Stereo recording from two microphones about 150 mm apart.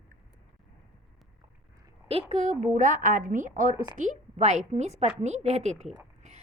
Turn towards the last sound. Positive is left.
turn(degrees=-10)  # may be behind; listen again after turning